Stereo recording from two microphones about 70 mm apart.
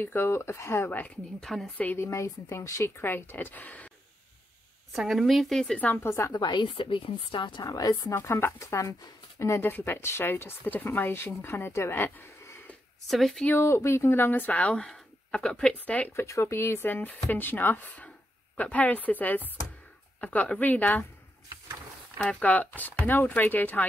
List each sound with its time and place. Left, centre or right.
0.0 s speech: left
1.4 s a woman's voice: centre
2.0 s speech: left
3.0 s speech: left
4.9 s a woman's voice: centre
5.9 s speech: left
6.3 s a woman's voice: left
7.6 s speech: left
8.1 s speech: left
9.6 s speech: left
13.0 s a woman's voice: centre
13.6 s speech: left
16.1 s speech: left
22.2 s speech: centre